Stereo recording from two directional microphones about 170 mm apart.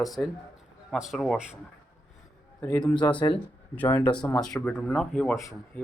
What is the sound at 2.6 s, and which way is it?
A man's voice, 15° left (ahead or behind).